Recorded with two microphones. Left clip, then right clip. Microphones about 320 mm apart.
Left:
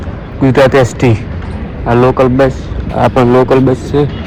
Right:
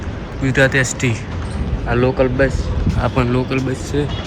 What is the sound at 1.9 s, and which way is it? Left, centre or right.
Speech, left.